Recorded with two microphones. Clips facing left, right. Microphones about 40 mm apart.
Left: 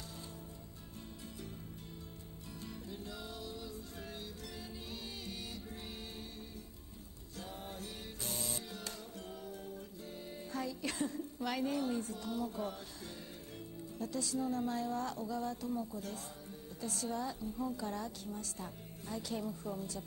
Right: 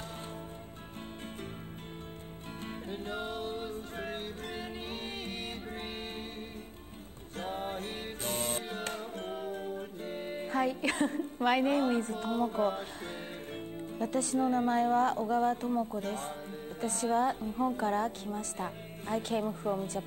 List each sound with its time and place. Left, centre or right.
2.6 s music: right
7.3 s music: right
13.9 s a woman's voice: right